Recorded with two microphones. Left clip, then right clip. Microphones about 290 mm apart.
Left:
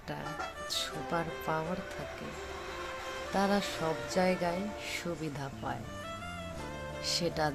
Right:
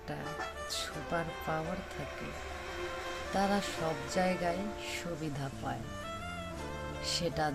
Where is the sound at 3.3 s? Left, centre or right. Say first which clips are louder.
Left 1 dB; centre.